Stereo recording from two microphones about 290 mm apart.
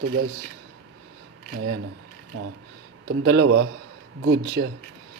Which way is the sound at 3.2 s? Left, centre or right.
Right.